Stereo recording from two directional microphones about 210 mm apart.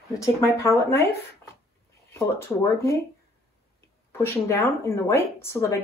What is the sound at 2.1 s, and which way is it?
Speech, 15° left (ahead or behind).